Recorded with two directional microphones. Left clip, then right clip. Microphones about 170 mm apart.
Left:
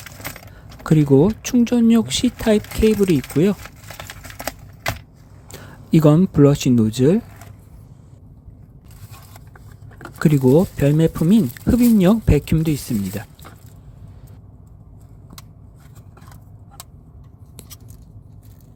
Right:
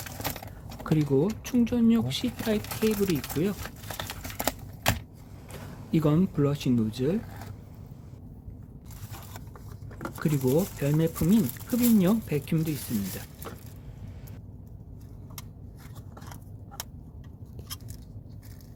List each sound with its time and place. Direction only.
0.9 s speech: 45° left (ahead or behind)
4.2 s a sound: 5° right (ahead or behind)
5.5 s speech: 45° left (ahead or behind)
10.2 s speech: 45° left (ahead or behind)